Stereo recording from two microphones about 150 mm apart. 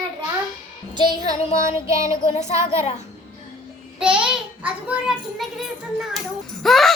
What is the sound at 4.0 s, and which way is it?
Child singing, 5° right (ahead or behind).